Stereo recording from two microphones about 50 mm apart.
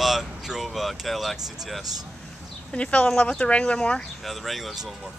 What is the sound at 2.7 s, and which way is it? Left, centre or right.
Speech, left.